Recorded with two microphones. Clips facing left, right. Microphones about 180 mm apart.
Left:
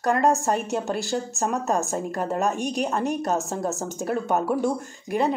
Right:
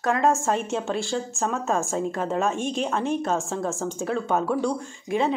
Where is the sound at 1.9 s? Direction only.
Centre (ahead or behind).